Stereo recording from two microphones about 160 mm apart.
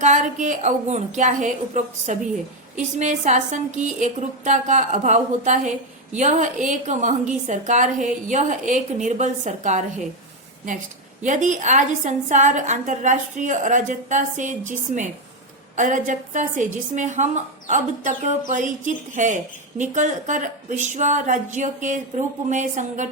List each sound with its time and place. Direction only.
0.0 s a woman's voice: 50° right (ahead or behind)
11.2 s a woman's voice: 50° right (ahead or behind)